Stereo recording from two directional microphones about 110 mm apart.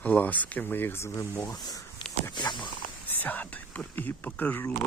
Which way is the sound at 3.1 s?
15° left (ahead or behind).